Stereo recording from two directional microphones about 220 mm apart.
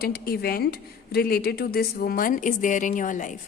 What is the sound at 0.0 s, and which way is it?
A woman's voice, 45° left (ahead or behind).